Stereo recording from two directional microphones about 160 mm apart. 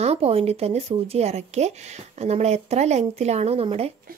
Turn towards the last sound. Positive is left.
turn(degrees=-40)  # may be behind; listen again after turning